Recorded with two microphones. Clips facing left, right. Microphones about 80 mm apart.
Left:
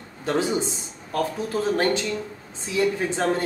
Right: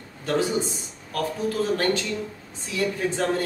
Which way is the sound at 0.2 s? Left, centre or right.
Left.